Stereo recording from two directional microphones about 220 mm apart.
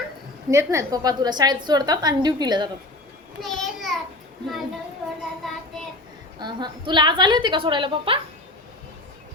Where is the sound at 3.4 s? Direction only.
Centre (ahead or behind).